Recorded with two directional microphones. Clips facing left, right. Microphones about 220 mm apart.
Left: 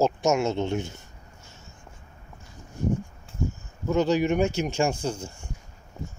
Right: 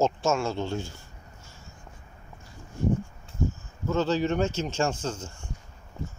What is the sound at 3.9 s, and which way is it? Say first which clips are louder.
Speech: left 3 dB; 15° left (ahead or behind).